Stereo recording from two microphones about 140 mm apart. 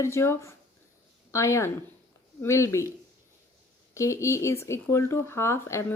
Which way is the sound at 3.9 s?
20° left (ahead or behind).